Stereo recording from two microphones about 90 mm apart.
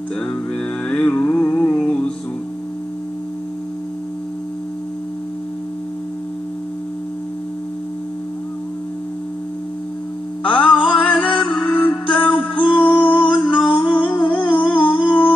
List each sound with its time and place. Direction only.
0.8 s mantra: 10° left (ahead or behind)
10.4 s mantra: 15° left (ahead or behind)
10.7 s music: 5° left (ahead or behind)
14.9 s humming: 15° left (ahead or behind)